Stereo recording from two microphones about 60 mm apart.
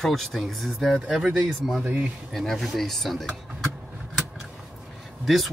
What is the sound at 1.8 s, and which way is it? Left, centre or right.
Speech, right.